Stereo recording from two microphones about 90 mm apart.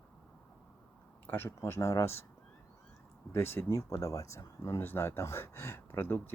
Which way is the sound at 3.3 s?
25° left (ahead or behind).